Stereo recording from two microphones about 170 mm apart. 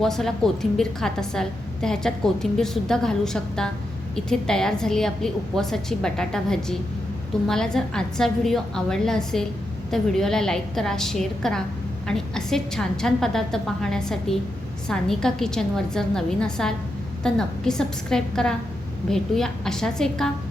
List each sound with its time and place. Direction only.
0.0 s a woman's voice: centre (ahead or behind)